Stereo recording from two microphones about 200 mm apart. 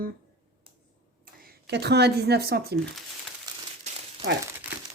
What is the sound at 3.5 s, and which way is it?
Crumpling, 20° right (ahead or behind).